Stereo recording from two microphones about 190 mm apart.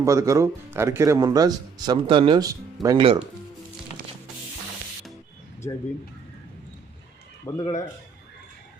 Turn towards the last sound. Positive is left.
turn(degrees=15)  # may be behind; listen again after turning